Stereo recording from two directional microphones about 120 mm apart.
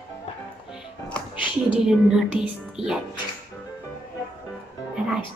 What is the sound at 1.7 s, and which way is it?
Speech, 5° right (ahead or behind).